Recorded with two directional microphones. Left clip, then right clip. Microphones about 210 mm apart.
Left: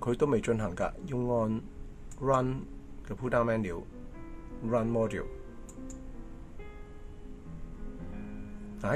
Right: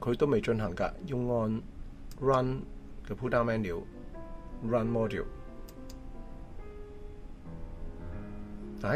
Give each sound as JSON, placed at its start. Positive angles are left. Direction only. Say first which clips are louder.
{"t": 0.0, "sound": "speech", "louder": "even", "side_deg": -15}
{"t": 8.8, "sound": "speech", "louder": "even", "side_deg": -15}